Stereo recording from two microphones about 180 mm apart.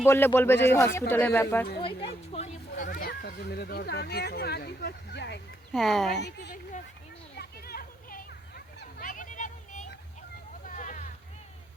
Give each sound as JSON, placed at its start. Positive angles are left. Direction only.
{"t": 0.0, "sound": "speech", "side_deg": 15}
{"t": 1.8, "sound": "speech", "side_deg": 30}
{"t": 5.7, "sound": "speech", "side_deg": 0}
{"t": 6.1, "sound": "a woman's voice", "side_deg": 70}
{"t": 7.3, "sound": "a sound", "side_deg": 60}
{"t": 10.7, "sound": "vehicle", "side_deg": 45}